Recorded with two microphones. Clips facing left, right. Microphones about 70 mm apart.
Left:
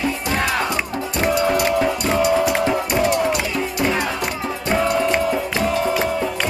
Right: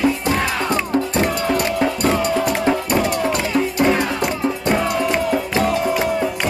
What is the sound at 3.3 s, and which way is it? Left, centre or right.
Music, right.